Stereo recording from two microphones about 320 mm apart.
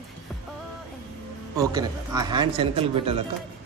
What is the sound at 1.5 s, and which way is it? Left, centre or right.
Speech, centre.